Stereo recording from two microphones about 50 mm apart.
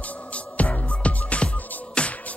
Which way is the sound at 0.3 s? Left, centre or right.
Left.